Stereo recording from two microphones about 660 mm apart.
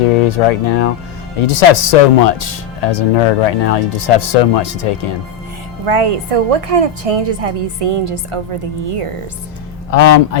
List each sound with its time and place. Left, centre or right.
0.3 s speech: left
5.8 s a woman's voice: right
9.9 s speech: left